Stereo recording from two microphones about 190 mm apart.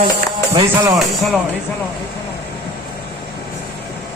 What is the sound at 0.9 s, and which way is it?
Speech, centre (ahead or behind).